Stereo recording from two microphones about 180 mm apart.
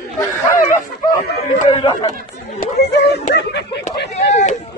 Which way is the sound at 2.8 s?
70° left (ahead or behind).